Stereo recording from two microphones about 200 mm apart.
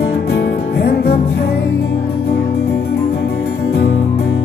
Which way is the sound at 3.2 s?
50° left (ahead or behind).